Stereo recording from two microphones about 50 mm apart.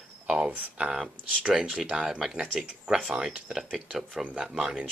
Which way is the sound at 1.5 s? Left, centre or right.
Centre.